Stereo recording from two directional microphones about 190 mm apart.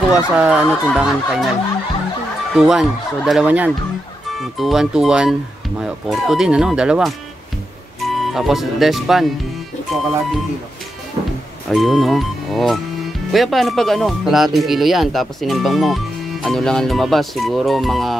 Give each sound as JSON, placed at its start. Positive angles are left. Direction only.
{"t": 0.1, "sound": "speech", "side_deg": -5}
{"t": 2.5, "sound": "speech", "side_deg": 0}
{"t": 8.2, "sound": "speech", "side_deg": 0}
{"t": 11.7, "sound": "speech", "side_deg": 0}